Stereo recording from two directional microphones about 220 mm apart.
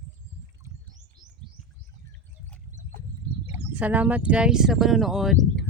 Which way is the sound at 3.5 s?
5° right (ahead or behind).